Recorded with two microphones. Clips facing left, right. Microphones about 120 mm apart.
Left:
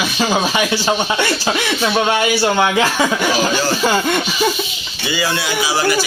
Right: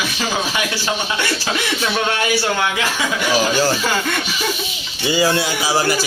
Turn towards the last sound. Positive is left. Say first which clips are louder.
# left 1 dB
turn(degrees=-35)  # may be behind; listen again after turning